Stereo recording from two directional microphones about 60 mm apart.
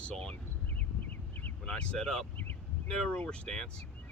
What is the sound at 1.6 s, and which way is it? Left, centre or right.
Speech, centre.